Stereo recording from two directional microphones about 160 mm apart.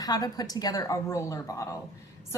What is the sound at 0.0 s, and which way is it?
A woman's voice, 25° left (ahead or behind).